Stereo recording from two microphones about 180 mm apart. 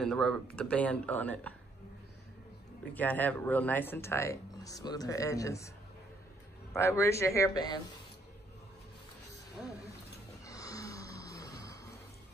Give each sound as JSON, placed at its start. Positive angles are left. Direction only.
{"t": 0.0, "sound": "speech", "side_deg": 5}
{"t": 2.9, "sound": "speech", "side_deg": 10}
{"t": 6.7, "sound": "speech", "side_deg": 15}
{"t": 10.4, "sound": "a sound", "side_deg": 20}